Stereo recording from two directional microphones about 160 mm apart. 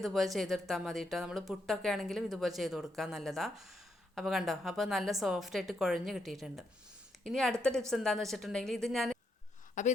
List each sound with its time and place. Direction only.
0.0 s speech: centre (ahead or behind)
9.8 s a woman's voice: 50° left (ahead or behind)